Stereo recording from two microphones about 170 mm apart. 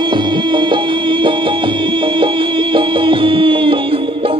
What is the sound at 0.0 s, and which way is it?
Music, 30° right (ahead or behind).